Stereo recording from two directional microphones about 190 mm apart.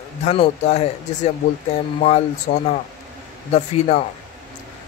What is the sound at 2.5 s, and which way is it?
Speech, 40° left (ahead or behind).